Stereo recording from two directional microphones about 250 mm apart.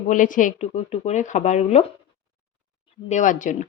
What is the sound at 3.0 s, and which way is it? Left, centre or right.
Speech, left.